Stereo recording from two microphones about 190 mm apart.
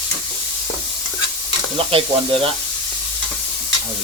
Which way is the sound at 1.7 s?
30° right (ahead or behind).